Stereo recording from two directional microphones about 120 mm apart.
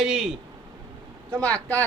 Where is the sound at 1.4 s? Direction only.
10° left (ahead or behind).